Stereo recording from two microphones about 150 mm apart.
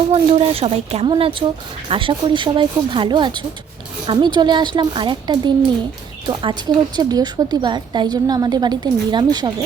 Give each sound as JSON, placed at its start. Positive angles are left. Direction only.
{"t": 0.1, "sound": "speech", "side_deg": -40}
{"t": 1.1, "sound": "a woman's voice", "side_deg": -35}